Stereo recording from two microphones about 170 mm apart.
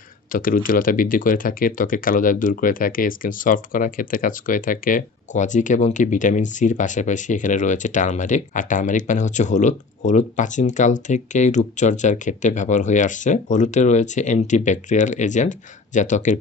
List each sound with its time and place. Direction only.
0.3 s speech: 55° left (ahead or behind)